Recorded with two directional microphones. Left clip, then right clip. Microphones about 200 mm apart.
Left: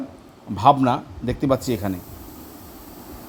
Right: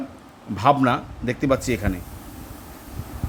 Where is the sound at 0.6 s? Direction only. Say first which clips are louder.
Left 2 dB; centre (ahead or behind).